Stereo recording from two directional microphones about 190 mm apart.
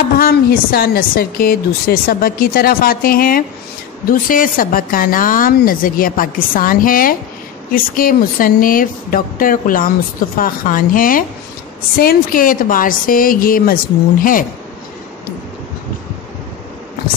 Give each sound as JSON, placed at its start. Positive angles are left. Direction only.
{"t": 0.2, "sound": "speech", "side_deg": 50}